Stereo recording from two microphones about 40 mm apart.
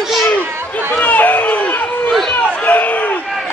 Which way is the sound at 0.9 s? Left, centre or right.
Left.